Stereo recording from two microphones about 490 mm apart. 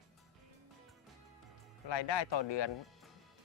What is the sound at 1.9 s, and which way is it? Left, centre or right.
Speech, left.